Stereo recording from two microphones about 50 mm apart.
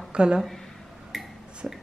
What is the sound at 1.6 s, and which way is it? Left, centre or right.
Speech, right.